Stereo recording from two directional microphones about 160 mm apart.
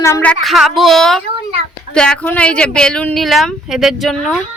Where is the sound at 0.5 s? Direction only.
Centre (ahead or behind).